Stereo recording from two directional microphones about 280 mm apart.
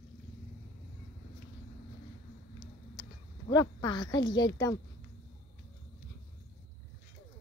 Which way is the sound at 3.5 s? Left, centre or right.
Centre.